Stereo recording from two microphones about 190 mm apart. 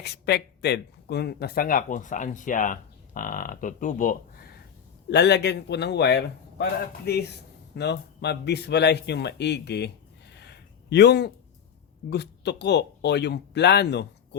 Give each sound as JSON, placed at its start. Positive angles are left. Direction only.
{"t": 0.0, "sound": "speech", "side_deg": 60}
{"t": 5.1, "sound": "speech", "side_deg": 65}
{"t": 10.3, "sound": "a sound", "side_deg": 60}
{"t": 12.1, "sound": "speech", "side_deg": 60}